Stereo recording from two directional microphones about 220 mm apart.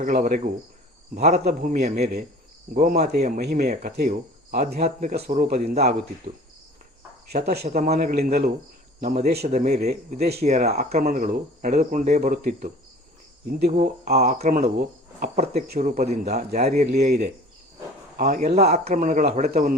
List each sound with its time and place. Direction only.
0.0 s speech: 35° right (ahead or behind)
7.3 s speech: 45° right (ahead or behind); by 15.6 s 30° right (ahead or behind)
15.6 s speech: 40° right (ahead or behind)
18.2 s speech: 35° right (ahead or behind)